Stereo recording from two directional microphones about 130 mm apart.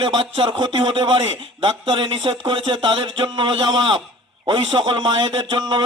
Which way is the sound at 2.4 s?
40° right (ahead or behind).